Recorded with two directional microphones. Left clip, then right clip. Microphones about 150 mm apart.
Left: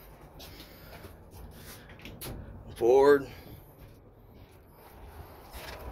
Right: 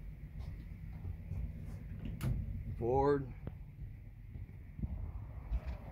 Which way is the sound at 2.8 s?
20° right (ahead or behind).